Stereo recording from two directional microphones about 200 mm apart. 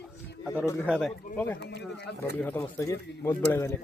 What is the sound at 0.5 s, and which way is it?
Speech, 15° left (ahead or behind).